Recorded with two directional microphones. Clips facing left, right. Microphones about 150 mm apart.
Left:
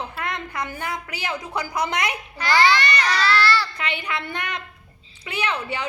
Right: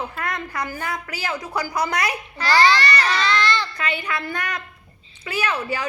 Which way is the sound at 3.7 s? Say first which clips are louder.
Right 2 dB; 25° left (ahead or behind).